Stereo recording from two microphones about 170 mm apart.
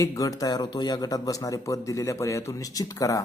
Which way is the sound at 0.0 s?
20° left (ahead or behind).